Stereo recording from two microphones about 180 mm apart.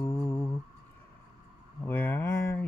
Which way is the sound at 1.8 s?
10° left (ahead or behind).